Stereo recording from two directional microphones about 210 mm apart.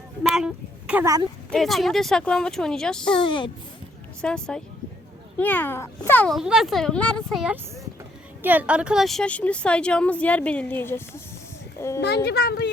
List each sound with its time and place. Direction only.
0.2 s speech: 5° right (ahead or behind)
1.5 s a woman's voice: centre (ahead or behind)
3.2 s speech: 25° left (ahead or behind)
4.2 s a woman's voice: 5° left (ahead or behind)
11.9 s speech: 50° left (ahead or behind)